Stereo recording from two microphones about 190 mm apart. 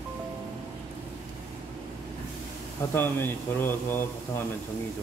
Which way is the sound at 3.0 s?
10° left (ahead or behind).